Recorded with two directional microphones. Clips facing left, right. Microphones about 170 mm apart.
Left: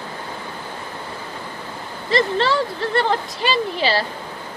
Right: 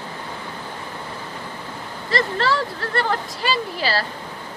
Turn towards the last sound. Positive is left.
turn(degrees=20)  # may be behind; listen again after turning